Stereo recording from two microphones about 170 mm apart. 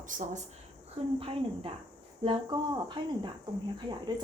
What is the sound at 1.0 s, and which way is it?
Speech, 35° right (ahead or behind).